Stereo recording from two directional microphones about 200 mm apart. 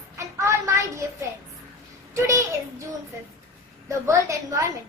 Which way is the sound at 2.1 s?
15° right (ahead or behind).